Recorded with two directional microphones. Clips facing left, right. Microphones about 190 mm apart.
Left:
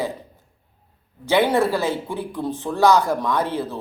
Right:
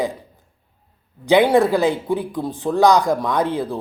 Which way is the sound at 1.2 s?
15° right (ahead or behind).